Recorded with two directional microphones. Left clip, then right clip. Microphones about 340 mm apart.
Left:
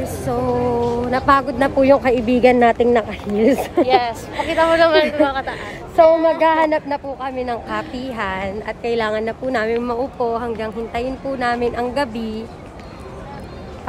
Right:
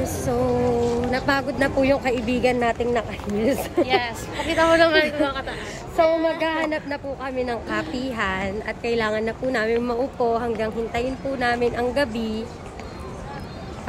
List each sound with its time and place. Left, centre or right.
0.0 s music: centre
1.1 s speech: centre
3.8 s a woman's voice: centre
5.0 s speech: centre
7.2 s a woman's voice: centre